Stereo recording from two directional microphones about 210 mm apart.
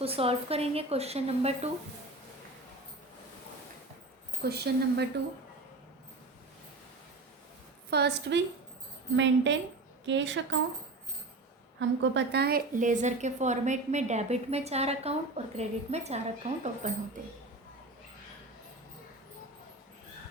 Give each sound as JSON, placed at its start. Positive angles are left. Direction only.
{"t": 0.0, "sound": "a woman's voice", "side_deg": -25}
{"t": 4.4, "sound": "speech", "side_deg": -50}
{"t": 7.9, "sound": "a woman's voice", "side_deg": -50}
{"t": 11.8, "sound": "a woman's voice", "side_deg": -55}